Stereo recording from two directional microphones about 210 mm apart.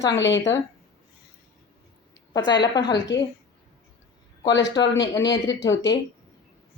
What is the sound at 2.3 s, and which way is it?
Speech, 20° left (ahead or behind).